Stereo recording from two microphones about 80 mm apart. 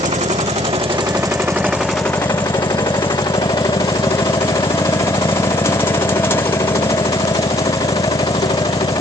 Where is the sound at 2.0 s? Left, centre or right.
Left.